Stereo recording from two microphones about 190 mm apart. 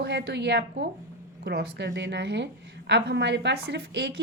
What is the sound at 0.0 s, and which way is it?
A woman's voice, 60° right (ahead or behind).